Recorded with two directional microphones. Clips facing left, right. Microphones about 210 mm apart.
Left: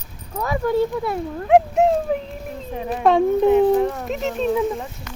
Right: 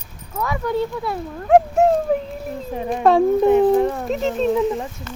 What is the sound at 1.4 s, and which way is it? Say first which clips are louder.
Speech: right 1 dB; centre (ahead or behind).